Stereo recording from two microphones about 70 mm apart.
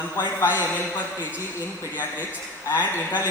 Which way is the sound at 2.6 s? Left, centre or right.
Left.